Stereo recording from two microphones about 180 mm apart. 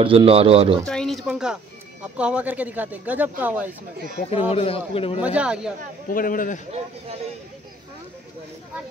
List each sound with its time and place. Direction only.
0.0 s speech: 30° right (ahead or behind)
0.8 s speech: 5° left (ahead or behind)
4.3 s a man's voice: 35° left (ahead or behind)
5.2 s speech: 5° right (ahead or behind)
6.0 s a man's voice: 50° left (ahead or behind)